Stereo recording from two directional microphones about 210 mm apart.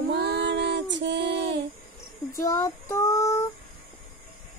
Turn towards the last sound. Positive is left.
turn(degrees=15)  # may be behind; listen again after turning